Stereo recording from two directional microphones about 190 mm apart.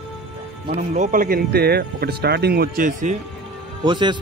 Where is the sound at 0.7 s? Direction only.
40° right (ahead or behind).